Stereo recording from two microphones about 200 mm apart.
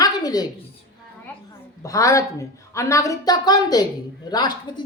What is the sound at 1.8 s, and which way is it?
A woman's voice, 15° left (ahead or behind).